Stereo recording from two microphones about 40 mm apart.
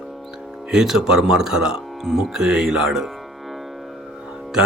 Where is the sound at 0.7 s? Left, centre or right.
Centre.